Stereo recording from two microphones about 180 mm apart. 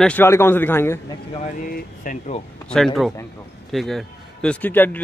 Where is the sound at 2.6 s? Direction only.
5° left (ahead or behind).